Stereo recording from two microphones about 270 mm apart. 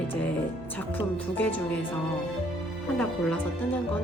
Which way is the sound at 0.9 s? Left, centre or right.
Centre.